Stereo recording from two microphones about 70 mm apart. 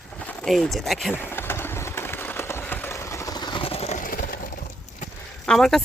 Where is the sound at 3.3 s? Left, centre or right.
Left.